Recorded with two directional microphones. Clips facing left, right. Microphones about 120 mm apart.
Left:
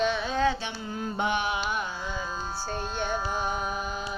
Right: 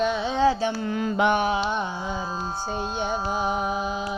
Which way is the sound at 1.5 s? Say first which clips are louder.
Right 5 dB; 30° right (ahead or behind).